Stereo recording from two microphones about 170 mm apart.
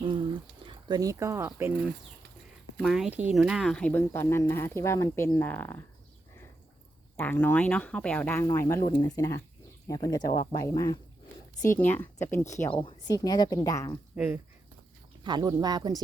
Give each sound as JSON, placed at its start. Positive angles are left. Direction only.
{"t": 0.0, "sound": "speech", "side_deg": -30}
{"t": 2.7, "sound": "speech", "side_deg": 0}
{"t": 7.2, "sound": "speech", "side_deg": 10}
{"t": 14.2, "sound": "speech", "side_deg": -5}
{"t": 15.2, "sound": "speech", "side_deg": -25}